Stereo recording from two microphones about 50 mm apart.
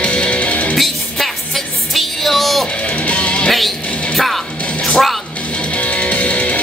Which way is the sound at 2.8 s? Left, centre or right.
Left.